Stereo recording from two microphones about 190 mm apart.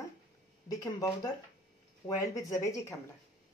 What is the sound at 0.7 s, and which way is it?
Speech, 15° left (ahead or behind).